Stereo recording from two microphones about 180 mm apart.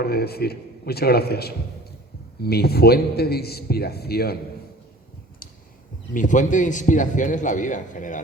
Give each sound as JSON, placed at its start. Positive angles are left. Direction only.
{"t": 0.0, "sound": "a man's voice", "side_deg": 60}
{"t": 6.1, "sound": "a man's voice", "side_deg": 45}